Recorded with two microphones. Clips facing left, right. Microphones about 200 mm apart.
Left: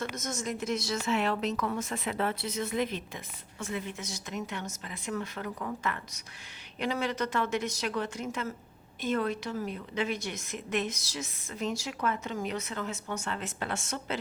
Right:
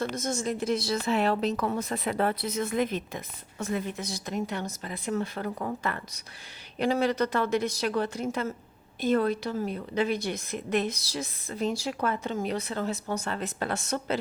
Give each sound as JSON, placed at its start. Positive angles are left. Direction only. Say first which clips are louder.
{"t": 0.2, "sound": "a woman's voice", "louder": "right 5 dB", "side_deg": -30}